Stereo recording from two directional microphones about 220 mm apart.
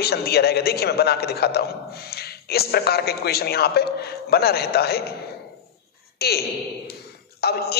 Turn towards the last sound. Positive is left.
turn(degrees=45)  # may be behind; listen again after turning